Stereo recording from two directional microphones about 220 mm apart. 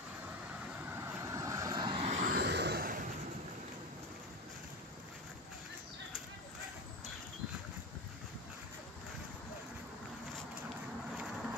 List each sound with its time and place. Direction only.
1.0 s vehicle: 15° right (ahead or behind); by 2.3 s 30° right (ahead or behind)
2.3 s vehicle: 50° right (ahead or behind)